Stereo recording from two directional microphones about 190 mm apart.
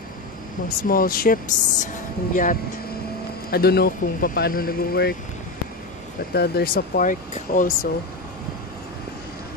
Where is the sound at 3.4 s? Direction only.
55° left (ahead or behind).